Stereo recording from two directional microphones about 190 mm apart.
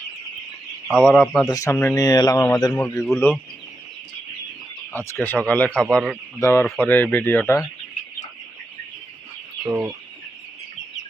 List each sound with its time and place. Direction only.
0.9 s speech: centre (ahead or behind)
1.5 s speech: 15° left (ahead or behind)
2.7 s speech: 10° left (ahead or behind)
5.2 s speech: 10° left (ahead or behind)
6.4 s speech: 15° left (ahead or behind)
9.6 s chicken: 10° right (ahead or behind)